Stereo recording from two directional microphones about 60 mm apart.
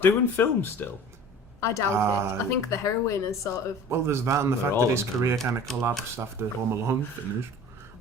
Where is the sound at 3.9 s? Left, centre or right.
Right.